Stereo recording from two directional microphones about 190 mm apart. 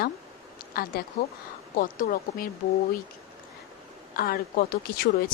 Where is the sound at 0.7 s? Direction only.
50° left (ahead or behind).